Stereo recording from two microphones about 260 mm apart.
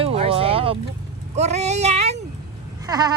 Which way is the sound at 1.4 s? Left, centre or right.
Right.